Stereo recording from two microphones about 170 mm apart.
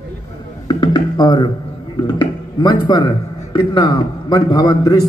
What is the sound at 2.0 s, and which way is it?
A man's voice, 25° left (ahead or behind).